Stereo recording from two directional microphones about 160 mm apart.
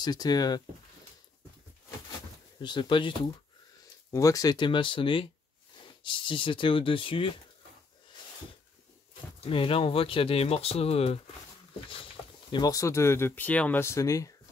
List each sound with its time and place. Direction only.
0.0 s speech: 25° left (ahead or behind)
2.6 s speech: 30° left (ahead or behind)
4.1 s speech: 20° left (ahead or behind)
9.4 s speech: 35° left (ahead or behind)
12.4 s speech: 25° left (ahead or behind)